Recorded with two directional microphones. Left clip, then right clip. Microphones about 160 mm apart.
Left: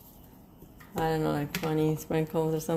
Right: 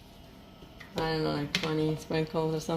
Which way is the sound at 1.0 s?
30° left (ahead or behind).